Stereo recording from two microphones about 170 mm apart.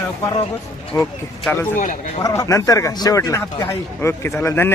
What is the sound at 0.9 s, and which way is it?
A man's voice, 15° left (ahead or behind).